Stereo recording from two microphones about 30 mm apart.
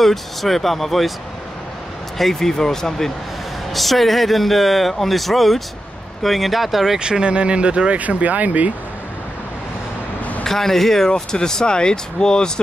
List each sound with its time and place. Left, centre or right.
0.0 s speech: centre
2.1 s speech: centre
3.7 s speech: centre
7.0 s speech: right
8.0 s speech: right
10.4 s speech: centre
11.1 s speech: left